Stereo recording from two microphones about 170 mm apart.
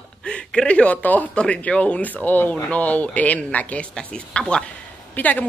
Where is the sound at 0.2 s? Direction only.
5° left (ahead or behind).